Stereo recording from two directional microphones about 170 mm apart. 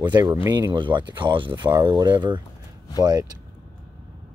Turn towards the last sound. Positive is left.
turn(degrees=-25)  # may be behind; listen again after turning